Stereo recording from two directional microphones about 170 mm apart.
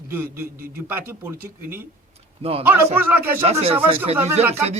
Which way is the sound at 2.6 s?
10° right (ahead or behind).